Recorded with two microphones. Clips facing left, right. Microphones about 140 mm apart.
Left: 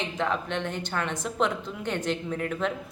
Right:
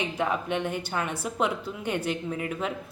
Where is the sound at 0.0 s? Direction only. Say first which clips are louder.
Right 1 dB; 10° right (ahead or behind).